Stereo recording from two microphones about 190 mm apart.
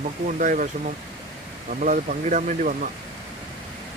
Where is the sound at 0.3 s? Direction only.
40° right (ahead or behind).